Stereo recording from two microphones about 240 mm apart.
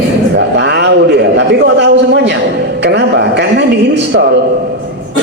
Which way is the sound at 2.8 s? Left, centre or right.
Right.